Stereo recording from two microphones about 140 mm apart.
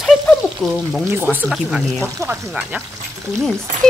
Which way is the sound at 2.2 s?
20° right (ahead or behind).